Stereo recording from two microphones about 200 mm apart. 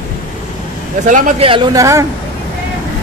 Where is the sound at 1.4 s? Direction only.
25° right (ahead or behind).